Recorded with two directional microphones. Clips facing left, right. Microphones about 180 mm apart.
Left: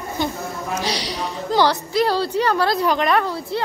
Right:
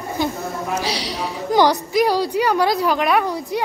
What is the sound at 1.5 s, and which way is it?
A woman's voice, 15° right (ahead or behind).